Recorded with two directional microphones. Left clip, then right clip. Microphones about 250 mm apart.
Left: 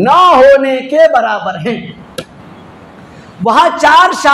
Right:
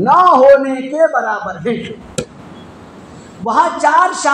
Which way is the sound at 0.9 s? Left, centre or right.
Left.